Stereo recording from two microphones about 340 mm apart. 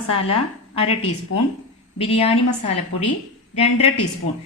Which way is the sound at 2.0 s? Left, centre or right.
Centre.